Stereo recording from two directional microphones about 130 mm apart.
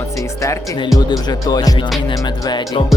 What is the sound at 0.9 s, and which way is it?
Music, 25° left (ahead or behind).